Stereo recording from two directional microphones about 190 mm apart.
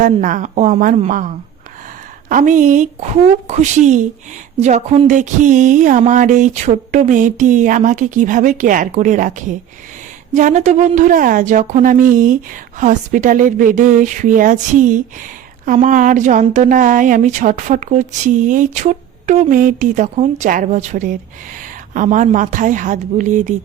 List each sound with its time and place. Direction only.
0.0 s speech: 45° right (ahead or behind)
2.3 s a woman's voice: 45° right (ahead or behind)